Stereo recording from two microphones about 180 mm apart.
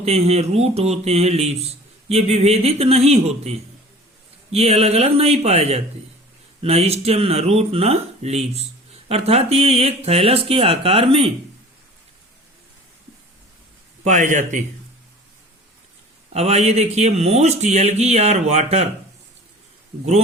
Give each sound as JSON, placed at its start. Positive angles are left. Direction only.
{"t": 0.0, "sound": "speech", "side_deg": -35}
{"t": 14.0, "sound": "a man's voice", "side_deg": -40}
{"t": 16.3, "sound": "speech", "side_deg": -35}